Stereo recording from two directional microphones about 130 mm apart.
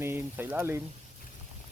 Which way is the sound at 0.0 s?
20° right (ahead or behind).